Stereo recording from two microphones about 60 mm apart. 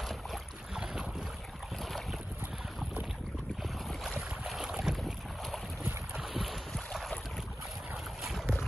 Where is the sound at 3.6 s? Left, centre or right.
Centre.